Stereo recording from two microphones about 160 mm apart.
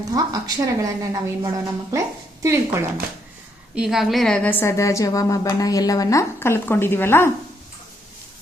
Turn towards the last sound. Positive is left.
turn(degrees=15)  # may be behind; listen again after turning